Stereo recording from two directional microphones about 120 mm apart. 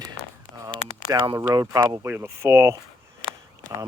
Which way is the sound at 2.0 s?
20° right (ahead or behind).